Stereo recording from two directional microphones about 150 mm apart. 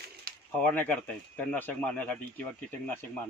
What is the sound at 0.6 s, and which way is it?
A man's voice, 10° left (ahead or behind).